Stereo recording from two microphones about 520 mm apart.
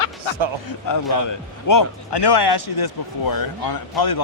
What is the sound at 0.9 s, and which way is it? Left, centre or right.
A man's voice, left.